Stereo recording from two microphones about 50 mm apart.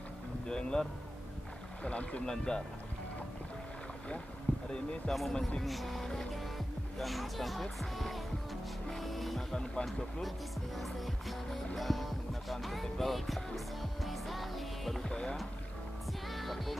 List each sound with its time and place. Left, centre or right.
0.5 s speech: centre
4.5 s a sound: centre
5.1 s speech: centre
5.6 s music: centre
9.5 s speech: centre
10.8 s music: centre
15.0 s rowboat: centre
16.1 s music: centre